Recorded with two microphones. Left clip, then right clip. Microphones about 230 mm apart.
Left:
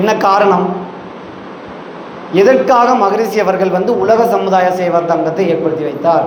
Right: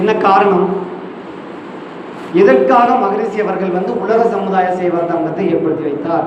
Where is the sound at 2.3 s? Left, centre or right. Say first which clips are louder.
Even; left.